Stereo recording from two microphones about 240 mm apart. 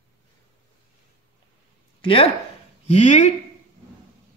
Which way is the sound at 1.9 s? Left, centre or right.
Left.